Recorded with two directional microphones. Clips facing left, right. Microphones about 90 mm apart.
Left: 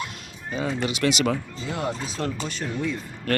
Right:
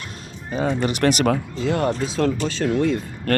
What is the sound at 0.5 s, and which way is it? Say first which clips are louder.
Speech: right 5 dB; 40° right (ahead or behind).